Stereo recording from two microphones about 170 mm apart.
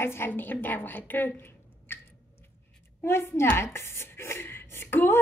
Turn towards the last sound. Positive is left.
turn(degrees=15)  # may be behind; listen again after turning